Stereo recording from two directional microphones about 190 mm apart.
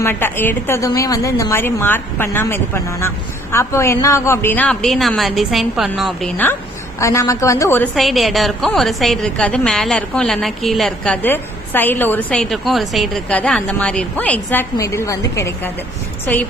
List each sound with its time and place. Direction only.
0.0 s a woman's voice: 10° left (ahead or behind)
6.3 s a woman's voice: 10° left (ahead or behind)
7.9 s a woman's voice: centre (ahead or behind)